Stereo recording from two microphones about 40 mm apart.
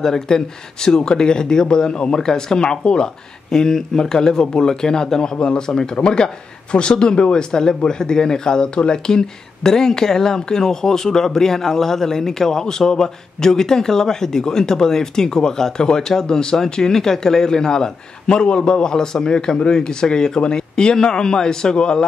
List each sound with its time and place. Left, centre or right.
0.0 s speech: centre